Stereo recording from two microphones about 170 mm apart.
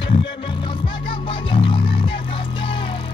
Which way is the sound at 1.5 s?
30° left (ahead or behind).